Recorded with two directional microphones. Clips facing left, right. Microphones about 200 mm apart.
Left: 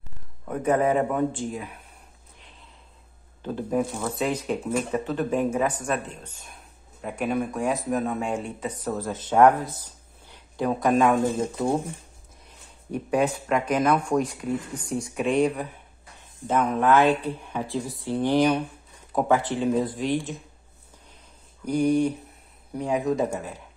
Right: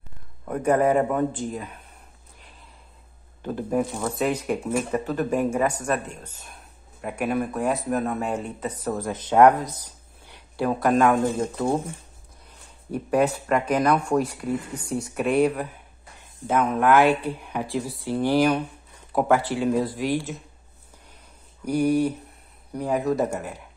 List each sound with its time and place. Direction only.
0.5 s speech: 5° right (ahead or behind)
3.4 s speech: 10° right (ahead or behind)
9.1 s speech: 20° right (ahead or behind)
10.6 s speech: 5° right (ahead or behind)
10.9 s speech: 10° left (ahead or behind)
12.9 s speech: centre (ahead or behind)
21.6 s speech: 5° right (ahead or behind)